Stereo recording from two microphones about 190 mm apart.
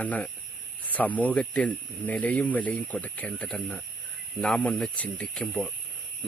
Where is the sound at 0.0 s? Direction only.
10° left (ahead or behind).